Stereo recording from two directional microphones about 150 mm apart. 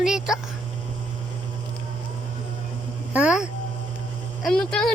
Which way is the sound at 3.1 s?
5° right (ahead or behind).